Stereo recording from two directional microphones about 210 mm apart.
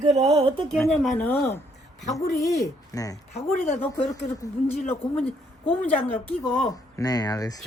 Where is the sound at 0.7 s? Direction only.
Centre (ahead or behind).